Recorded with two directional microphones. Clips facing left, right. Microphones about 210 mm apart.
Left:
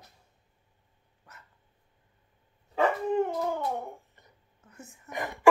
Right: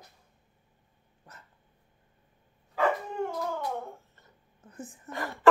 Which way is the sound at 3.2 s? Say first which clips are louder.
Left 2 dB; 15° left (ahead or behind).